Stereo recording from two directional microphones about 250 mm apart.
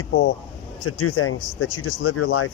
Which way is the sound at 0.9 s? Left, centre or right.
Left.